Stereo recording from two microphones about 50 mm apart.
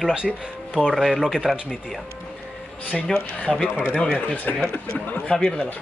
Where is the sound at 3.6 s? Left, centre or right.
Right.